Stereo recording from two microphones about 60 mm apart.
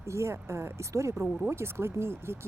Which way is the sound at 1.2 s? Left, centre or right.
Right.